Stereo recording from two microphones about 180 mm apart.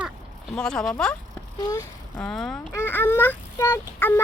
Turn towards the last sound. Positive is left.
turn(degrees=15)  # may be behind; listen again after turning